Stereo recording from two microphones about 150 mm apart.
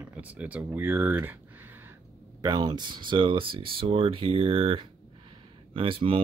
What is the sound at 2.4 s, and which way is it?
Speech, 30° right (ahead or behind).